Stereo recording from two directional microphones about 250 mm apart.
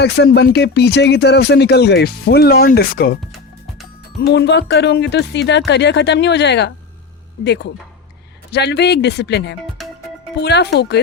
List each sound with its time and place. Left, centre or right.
0.0 s speech: left
4.3 s speech: left
9.8 s music: centre
10.4 s speech: left